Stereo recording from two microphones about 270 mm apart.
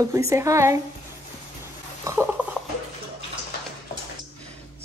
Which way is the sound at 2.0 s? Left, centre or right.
Centre.